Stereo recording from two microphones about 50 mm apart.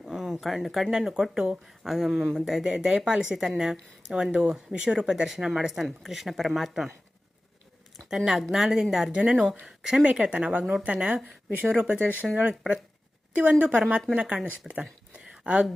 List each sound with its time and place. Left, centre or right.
0.0 s speech: centre
8.1 s speech: centre
9.1 s speech: centre
10.0 s speech: right
12.5 s speech: right
14.6 s speech: centre